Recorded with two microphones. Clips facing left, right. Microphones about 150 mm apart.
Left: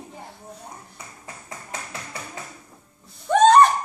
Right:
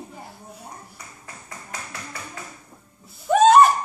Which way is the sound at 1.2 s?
25° left (ahead or behind).